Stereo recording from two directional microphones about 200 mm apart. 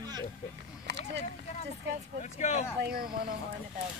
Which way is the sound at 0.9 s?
60° right (ahead or behind).